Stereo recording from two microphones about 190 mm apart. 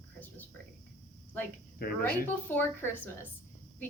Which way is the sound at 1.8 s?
55° left (ahead or behind).